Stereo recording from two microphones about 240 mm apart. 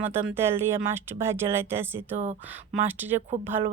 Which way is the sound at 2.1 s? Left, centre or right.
Right.